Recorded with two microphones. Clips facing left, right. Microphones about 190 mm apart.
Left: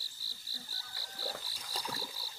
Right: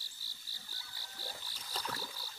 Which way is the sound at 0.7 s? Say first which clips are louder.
Right 1 dB; 40° left (ahead or behind).